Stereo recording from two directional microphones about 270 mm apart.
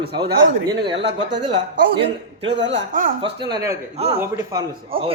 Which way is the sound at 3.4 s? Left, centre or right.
Centre.